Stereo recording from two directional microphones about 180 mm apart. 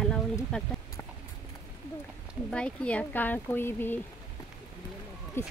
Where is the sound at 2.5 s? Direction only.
5° left (ahead or behind).